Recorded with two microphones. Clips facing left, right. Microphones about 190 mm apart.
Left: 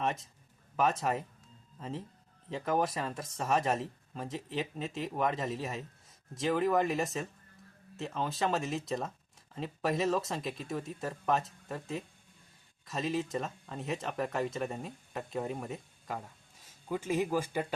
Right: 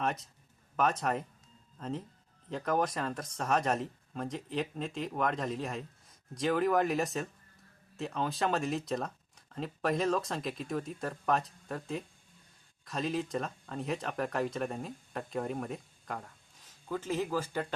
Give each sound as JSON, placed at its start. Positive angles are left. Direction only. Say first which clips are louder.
{"t": 0.0, "sound": "speech", "louder": "even", "side_deg": 0}